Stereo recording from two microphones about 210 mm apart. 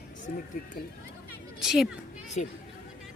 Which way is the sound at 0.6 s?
45° left (ahead or behind).